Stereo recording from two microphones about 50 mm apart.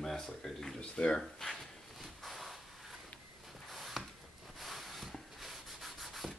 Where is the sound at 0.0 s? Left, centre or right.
Centre.